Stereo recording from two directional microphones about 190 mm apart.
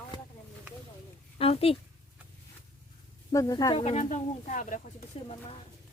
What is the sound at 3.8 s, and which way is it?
Speech, 35° left (ahead or behind).